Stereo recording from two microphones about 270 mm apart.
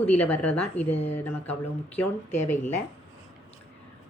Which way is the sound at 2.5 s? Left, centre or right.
Centre.